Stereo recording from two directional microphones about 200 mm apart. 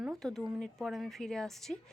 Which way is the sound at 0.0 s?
Centre (ahead or behind).